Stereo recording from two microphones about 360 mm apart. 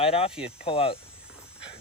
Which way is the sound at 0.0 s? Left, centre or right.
Centre.